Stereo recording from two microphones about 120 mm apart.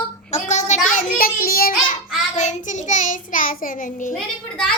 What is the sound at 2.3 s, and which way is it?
Child singing, 90° left.